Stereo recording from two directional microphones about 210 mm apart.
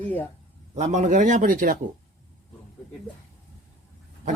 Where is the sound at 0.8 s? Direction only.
35° right (ahead or behind).